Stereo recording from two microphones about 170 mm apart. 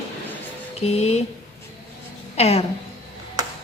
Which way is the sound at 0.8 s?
40° left (ahead or behind).